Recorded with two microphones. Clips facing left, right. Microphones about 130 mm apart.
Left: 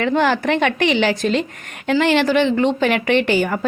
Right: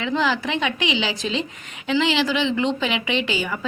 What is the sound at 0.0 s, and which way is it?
A woman's voice, 55° left (ahead or behind).